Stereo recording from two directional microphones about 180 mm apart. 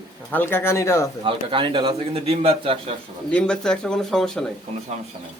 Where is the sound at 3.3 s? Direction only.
5° left (ahead or behind).